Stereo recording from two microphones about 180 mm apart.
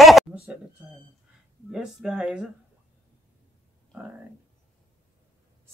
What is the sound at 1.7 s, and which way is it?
Speech, 5° right (ahead or behind).